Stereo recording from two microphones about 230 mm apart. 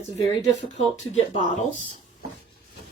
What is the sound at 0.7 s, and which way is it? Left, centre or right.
Speech, left.